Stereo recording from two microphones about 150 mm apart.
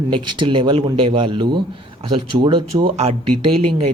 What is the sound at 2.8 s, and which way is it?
Speech, 45° right (ahead or behind).